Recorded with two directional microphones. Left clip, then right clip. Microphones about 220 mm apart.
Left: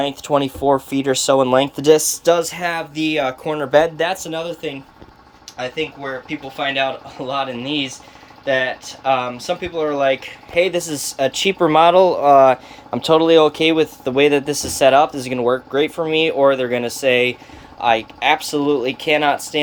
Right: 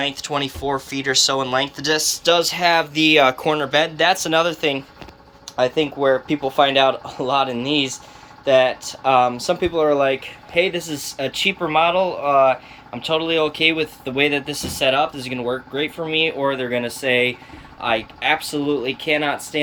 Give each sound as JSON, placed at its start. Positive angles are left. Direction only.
{"t": 0.0, "sound": "speech", "side_deg": 35}
{"t": 2.3, "sound": "speech", "side_deg": 15}
{"t": 3.7, "sound": "speech", "side_deg": 25}
{"t": 3.9, "sound": "speech", "side_deg": 10}
{"t": 5.5, "sound": "speech", "side_deg": -20}
{"t": 10.5, "sound": "speech", "side_deg": 10}
{"t": 11.6, "sound": "speech", "side_deg": 30}